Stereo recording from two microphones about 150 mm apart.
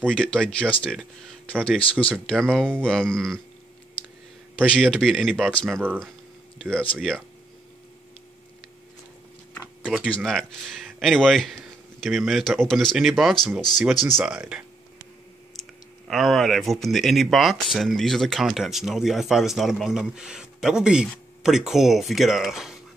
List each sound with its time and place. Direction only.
0.2 s speech: 5° left (ahead or behind)
4.6 s speech: 5° left (ahead or behind)
5.5 s speech: 10° left (ahead or behind)
10.0 s speech: 5° left (ahead or behind)
14.0 s speech: 15° right (ahead or behind)
16.1 s speech: centre (ahead or behind)